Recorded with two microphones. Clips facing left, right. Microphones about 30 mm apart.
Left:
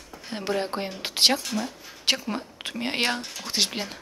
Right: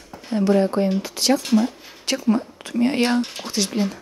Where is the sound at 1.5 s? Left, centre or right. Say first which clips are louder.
Right 11 dB; centre.